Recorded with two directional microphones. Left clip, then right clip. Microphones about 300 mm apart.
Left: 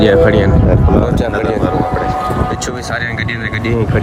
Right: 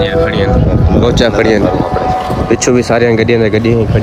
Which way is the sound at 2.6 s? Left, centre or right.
Centre.